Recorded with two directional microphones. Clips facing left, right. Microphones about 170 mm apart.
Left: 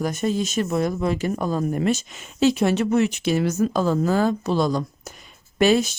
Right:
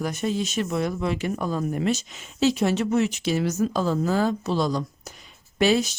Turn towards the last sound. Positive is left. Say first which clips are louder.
# left 3 dB
turn(degrees=50)  # may be behind; listen again after turning